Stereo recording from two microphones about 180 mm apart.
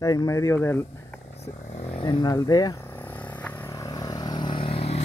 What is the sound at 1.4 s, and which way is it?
Vehicle, 35° left (ahead or behind).